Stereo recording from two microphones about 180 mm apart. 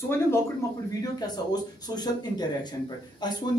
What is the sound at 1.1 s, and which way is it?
Speech, 20° left (ahead or behind).